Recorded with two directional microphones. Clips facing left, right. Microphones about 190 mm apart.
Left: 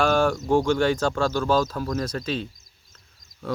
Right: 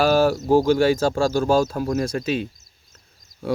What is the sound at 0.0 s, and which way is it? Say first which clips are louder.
Speech: right 3 dB; 5° right (ahead or behind).